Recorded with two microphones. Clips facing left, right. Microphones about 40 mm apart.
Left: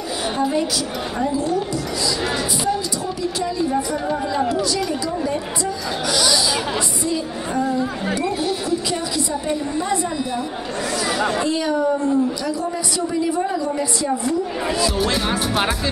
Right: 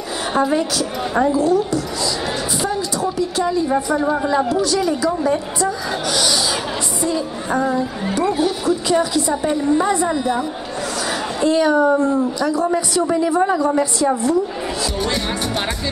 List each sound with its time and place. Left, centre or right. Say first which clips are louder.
3.9 s speech: right 5 dB; centre
4.6 s speech: right 4 dB; right
7.5 s speech: right 2 dB; right
11.4 s a woman's voice: right 5 dB; right
15.0 s speech: left 1 dB; centre